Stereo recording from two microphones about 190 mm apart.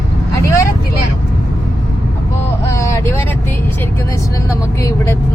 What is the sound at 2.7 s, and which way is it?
Vehicle, 15° left (ahead or behind).